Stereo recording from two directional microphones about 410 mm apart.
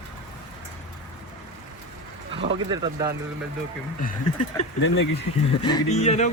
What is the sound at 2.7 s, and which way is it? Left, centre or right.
Speech, centre.